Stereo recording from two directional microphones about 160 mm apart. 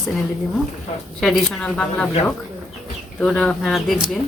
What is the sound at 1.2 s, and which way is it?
Speech, centre (ahead or behind).